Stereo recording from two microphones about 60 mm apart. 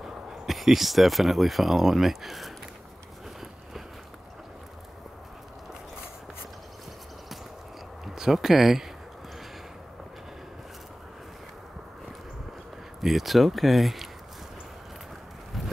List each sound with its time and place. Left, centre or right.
0.0 s speech: centre
8.0 s speech: centre
13.0 s speech: centre